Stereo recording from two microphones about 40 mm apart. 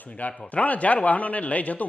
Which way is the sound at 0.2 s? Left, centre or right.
Left.